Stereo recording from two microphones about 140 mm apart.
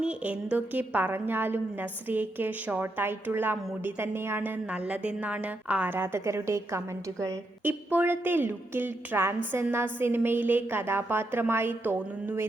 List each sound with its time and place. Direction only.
0.0 s a woman's voice: 10° right (ahead or behind)